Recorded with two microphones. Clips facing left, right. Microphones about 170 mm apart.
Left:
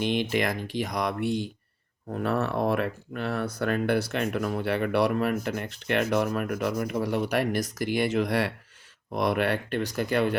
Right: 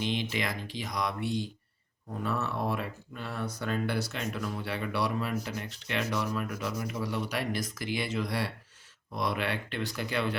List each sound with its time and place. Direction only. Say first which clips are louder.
0.0 s speech: left 6 dB; 55° left (ahead or behind)
9.1 s speech: left 6 dB; 55° left (ahead or behind)